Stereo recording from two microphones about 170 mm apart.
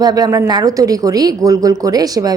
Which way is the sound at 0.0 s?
25° right (ahead or behind).